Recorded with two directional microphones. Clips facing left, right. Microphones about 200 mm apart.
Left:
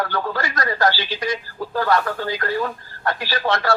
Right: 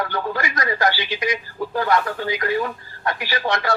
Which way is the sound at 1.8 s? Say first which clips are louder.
Left 1 dB; 45° left (ahead or behind).